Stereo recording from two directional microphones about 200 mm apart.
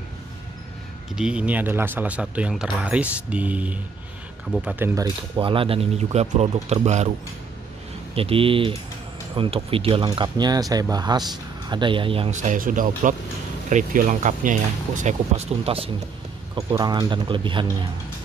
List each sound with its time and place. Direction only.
1.1 s speech: 5° right (ahead or behind)
5.0 s speech: 25° right (ahead or behind)
8.1 s speech: 30° right (ahead or behind)